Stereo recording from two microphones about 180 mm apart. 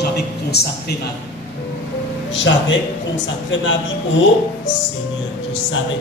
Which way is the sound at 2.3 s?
90° left.